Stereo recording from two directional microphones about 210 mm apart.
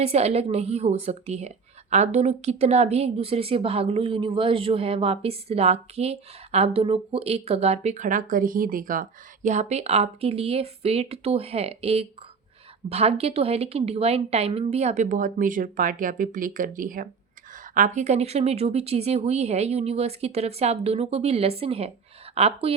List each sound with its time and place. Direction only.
0.0 s a woman's voice: 30° right (ahead or behind)